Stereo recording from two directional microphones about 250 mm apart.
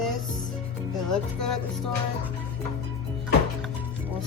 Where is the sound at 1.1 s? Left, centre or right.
Centre.